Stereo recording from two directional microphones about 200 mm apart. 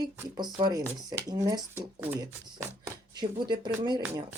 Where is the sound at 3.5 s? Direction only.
20° right (ahead or behind).